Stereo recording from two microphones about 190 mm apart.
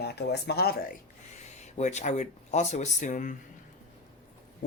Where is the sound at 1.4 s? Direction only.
35° left (ahead or behind).